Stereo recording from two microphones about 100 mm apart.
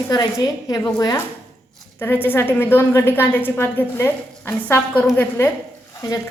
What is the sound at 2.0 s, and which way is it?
A woman's voice, 20° left (ahead or behind).